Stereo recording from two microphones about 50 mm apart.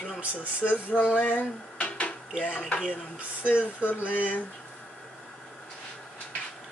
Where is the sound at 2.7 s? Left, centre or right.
Left.